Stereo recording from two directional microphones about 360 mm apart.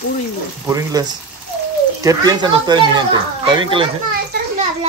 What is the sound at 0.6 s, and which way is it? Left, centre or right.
Speech, centre.